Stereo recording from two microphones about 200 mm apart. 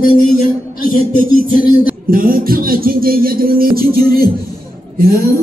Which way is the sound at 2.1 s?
45° right (ahead or behind).